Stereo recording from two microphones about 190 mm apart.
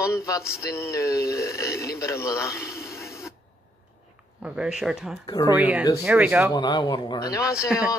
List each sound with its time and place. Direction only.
0.0 s music: 15° left (ahead or behind)
0.6 s speech: 15° left (ahead or behind)
4.4 s speech: 5° right (ahead or behind)
5.2 s speech: 20° left (ahead or behind)
5.6 s speech: 5° right (ahead or behind)
6.5 s speech: 20° left (ahead or behind)
7.5 s speech: 5° right (ahead or behind)